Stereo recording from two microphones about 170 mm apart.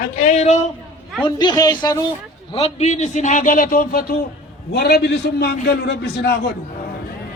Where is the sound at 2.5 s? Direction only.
40° left (ahead or behind); by 4.2 s 60° left (ahead or behind).